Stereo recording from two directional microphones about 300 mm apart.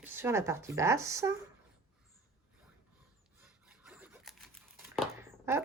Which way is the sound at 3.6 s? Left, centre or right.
Centre.